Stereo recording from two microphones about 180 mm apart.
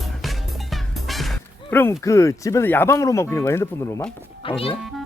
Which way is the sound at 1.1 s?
Centre (ahead or behind).